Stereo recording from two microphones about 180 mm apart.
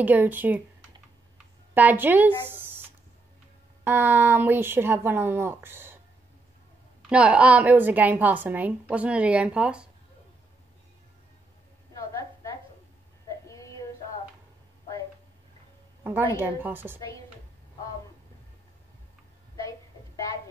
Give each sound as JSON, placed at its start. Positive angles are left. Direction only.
{"t": 0.0, "sound": "a woman's voice", "side_deg": -10}
{"t": 1.7, "sound": "speech", "side_deg": -10}
{"t": 3.8, "sound": "a woman's voice", "side_deg": -10}
{"t": 7.0, "sound": "a woman's voice", "side_deg": -5}
{"t": 13.5, "sound": "a sound", "side_deg": 15}
{"t": 16.0, "sound": "a woman's voice", "side_deg": -10}